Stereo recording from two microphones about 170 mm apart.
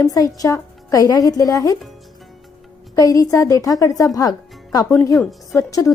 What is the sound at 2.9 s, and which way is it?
Speech, 20° left (ahead or behind).